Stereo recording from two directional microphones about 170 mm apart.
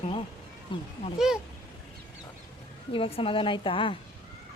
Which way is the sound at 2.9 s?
35° left (ahead or behind).